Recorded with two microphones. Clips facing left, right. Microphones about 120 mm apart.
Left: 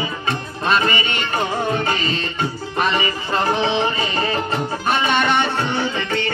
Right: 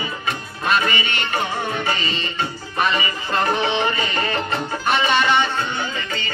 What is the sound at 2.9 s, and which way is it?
Music, 30° left (ahead or behind).